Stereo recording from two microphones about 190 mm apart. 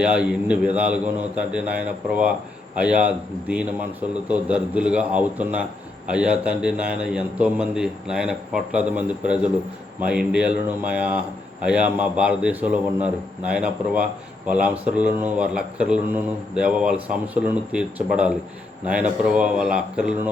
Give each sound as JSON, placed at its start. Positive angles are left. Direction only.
{"t": 0.0, "sound": "a man's voice", "side_deg": -5}